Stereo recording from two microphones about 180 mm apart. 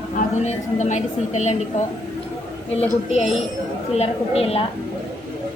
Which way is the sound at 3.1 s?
35° left (ahead or behind).